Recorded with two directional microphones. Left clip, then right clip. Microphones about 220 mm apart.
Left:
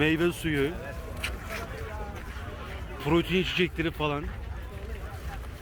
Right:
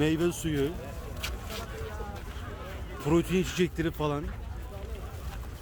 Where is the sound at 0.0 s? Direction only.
20° right (ahead or behind).